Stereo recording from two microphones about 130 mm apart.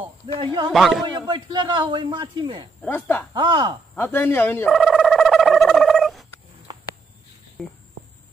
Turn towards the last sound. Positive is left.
turn(degrees=0)  # may be behind; listen again after turning